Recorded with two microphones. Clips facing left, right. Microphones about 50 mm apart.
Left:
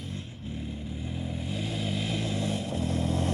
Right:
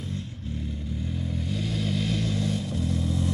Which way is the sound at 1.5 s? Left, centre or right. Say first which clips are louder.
Right 3 dB; left.